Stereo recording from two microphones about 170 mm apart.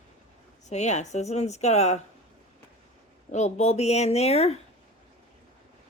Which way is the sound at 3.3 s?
40° left (ahead or behind).